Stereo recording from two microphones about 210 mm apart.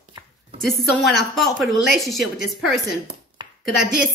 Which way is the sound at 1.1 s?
Centre (ahead or behind).